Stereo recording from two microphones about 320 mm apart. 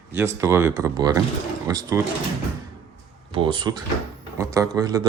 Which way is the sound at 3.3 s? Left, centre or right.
Centre.